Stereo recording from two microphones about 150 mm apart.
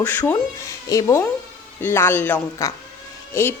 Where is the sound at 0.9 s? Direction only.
20° left (ahead or behind).